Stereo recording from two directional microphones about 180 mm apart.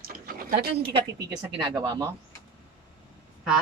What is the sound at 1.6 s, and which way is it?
Speech, 20° right (ahead or behind).